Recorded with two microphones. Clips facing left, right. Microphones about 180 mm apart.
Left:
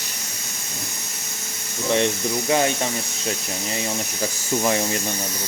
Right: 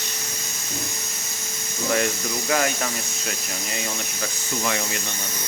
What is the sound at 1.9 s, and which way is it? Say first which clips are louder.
Speech: left 3 dB; 25° left (ahead or behind).